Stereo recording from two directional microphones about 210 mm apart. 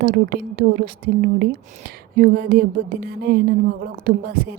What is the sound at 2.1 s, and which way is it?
Speech, 50° right (ahead or behind).